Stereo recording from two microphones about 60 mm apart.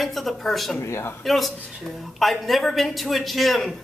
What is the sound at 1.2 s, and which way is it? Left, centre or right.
A woman's voice, centre.